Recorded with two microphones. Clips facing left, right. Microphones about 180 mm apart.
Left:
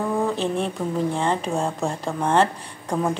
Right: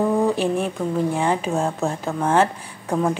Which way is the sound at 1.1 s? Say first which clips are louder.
Right 2 dB; 5° right (ahead or behind).